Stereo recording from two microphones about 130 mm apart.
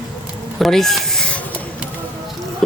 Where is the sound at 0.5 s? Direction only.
Centre (ahead or behind).